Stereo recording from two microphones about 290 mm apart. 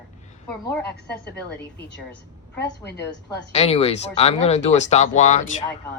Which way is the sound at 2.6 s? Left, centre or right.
Left.